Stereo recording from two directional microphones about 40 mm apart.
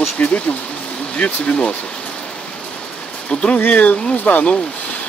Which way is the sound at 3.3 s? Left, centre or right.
Left.